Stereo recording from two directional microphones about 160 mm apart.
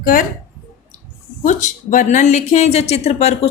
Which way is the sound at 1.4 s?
50° left (ahead or behind).